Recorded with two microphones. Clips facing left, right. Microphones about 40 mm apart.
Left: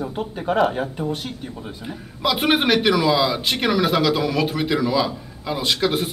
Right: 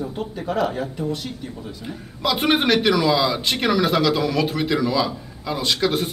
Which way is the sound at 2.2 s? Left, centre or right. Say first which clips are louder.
Even; centre.